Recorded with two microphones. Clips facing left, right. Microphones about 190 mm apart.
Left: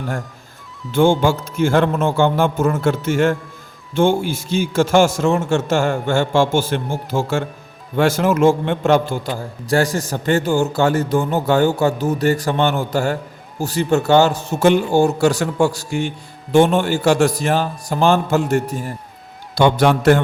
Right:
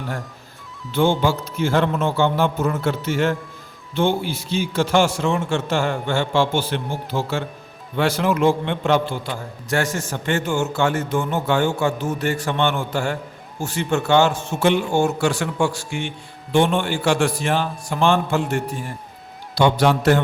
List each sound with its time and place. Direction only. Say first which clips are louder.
0.9 s a man's voice: left 4 dB; 50° left (ahead or behind)
19.5 s a man's voice: left 3 dB; 50° left (ahead or behind)